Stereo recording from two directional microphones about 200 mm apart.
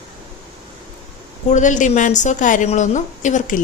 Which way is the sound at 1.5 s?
40° left (ahead or behind).